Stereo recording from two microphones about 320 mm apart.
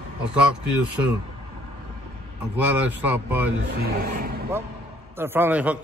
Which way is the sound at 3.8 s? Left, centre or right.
Right.